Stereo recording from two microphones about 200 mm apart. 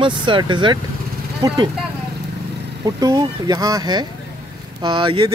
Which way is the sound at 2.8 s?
15° right (ahead or behind).